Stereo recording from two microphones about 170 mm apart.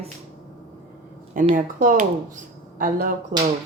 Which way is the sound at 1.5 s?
50° right (ahead or behind).